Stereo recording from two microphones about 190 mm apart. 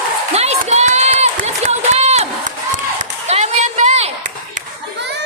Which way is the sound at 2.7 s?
40° right (ahead or behind).